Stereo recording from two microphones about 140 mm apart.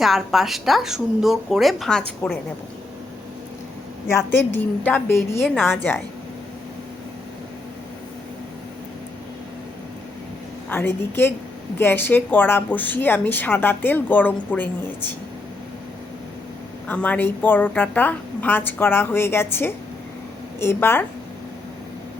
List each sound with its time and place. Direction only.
0.0 s speech: centre (ahead or behind)
4.3 s a woman's voice: 15° left (ahead or behind)
10.7 s a woman's voice: 15° left (ahead or behind)
16.9 s a woman's voice: 10° left (ahead or behind)